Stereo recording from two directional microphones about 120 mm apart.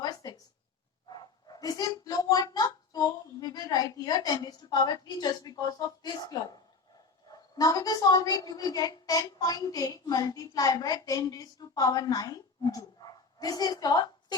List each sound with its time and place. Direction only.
0.0 s a sound: 35° left (ahead or behind)
1.1 s dog: 35° left (ahead or behind)
7.3 s a woman's voice: 35° left (ahead or behind)